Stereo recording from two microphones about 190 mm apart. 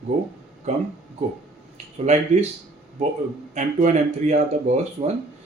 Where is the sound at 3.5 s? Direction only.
40° right (ahead or behind).